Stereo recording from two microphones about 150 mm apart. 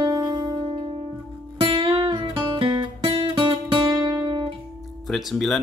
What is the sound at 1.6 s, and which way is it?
Music, 35° right (ahead or behind).